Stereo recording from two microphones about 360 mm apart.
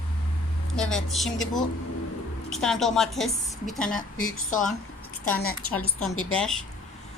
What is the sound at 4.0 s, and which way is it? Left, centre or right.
Speech, left.